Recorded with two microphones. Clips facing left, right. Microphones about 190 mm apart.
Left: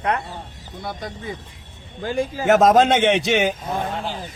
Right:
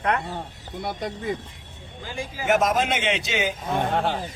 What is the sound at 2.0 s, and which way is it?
A man's voice, 60° left (ahead or behind).